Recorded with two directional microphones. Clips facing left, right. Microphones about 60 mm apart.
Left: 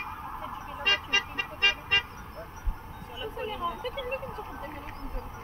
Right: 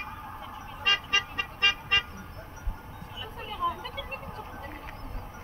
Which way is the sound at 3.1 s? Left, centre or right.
Centre.